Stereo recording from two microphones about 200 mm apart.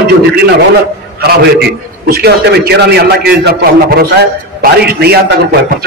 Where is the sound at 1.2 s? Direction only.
55° right (ahead or behind).